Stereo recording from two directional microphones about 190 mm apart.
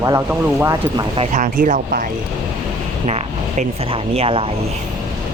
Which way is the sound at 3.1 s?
35° right (ahead or behind).